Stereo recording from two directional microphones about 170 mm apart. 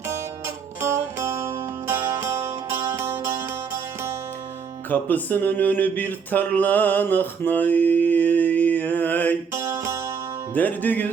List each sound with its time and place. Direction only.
0.4 s music: 15° right (ahead or behind)
4.9 s speech: 10° left (ahead or behind)
9.5 s music: 15° right (ahead or behind)
10.5 s speech: 10° left (ahead or behind)